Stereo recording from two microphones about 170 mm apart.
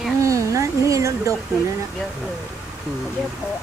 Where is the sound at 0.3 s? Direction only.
20° right (ahead or behind).